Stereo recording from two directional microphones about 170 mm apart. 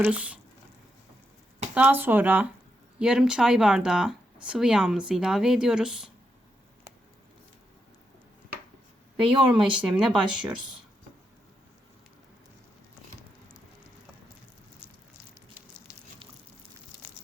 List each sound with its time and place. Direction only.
0.0 s speech: 10° right (ahead or behind)
1.7 s speech: 10° right (ahead or behind)
9.5 s speech: 5° right (ahead or behind)
15.9 s a sound: 15° left (ahead or behind)